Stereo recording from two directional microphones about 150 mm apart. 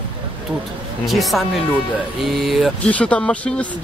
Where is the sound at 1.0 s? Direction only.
Centre (ahead or behind).